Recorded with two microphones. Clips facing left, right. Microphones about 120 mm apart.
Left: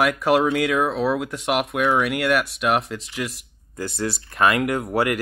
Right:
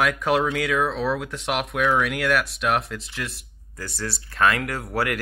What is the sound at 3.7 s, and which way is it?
Speech, 20° left (ahead or behind).